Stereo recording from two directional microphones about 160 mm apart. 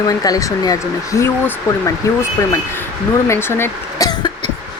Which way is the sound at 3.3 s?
15° left (ahead or behind).